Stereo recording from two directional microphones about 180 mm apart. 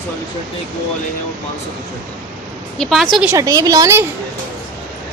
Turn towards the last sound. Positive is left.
turn(degrees=-15)  # may be behind; listen again after turning